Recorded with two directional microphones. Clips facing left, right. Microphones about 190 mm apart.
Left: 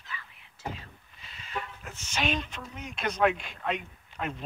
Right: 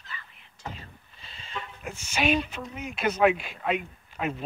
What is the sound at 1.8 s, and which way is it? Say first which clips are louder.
Speech: right 7 dB; 10° right (ahead or behind).